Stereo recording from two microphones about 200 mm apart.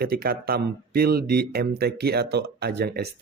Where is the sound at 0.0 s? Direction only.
50° right (ahead or behind).